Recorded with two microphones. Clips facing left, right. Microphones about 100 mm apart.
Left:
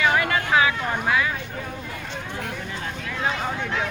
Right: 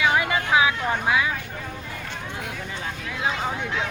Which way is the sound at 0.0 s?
10° right (ahead or behind).